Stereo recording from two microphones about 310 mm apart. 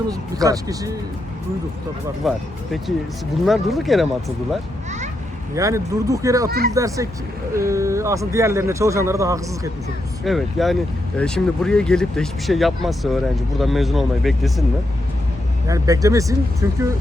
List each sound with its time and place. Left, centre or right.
0.1 s speech: centre
2.2 s speech: centre
3.4 s speech: centre
5.5 s speech: centre
15.6 s speech: centre